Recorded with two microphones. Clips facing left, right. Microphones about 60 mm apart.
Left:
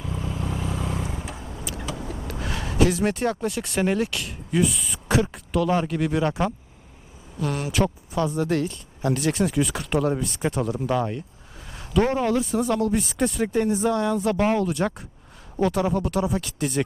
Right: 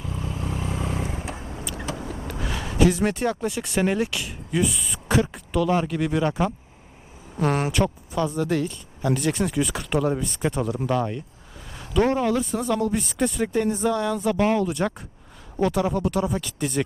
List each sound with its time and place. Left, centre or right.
0.0 s vehicle: left
0.4 s vehicle: right
2.2 s speech: centre
7.3 s speech: right
7.7 s speech: centre
11.7 s a sound: centre
12.1 s speech: centre